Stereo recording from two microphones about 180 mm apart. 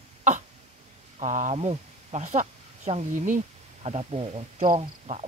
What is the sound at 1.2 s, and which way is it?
Speech, 40° right (ahead or behind).